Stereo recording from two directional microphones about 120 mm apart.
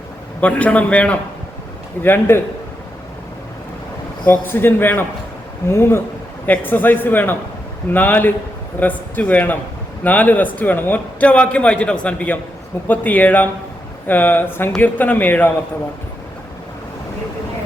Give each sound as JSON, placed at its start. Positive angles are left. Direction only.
{"t": 0.4, "sound": "a man's voice", "side_deg": 10}
{"t": 4.3, "sound": "a man's voice", "side_deg": 15}